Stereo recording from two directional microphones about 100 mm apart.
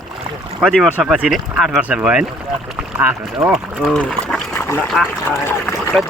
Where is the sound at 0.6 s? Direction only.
5° right (ahead or behind).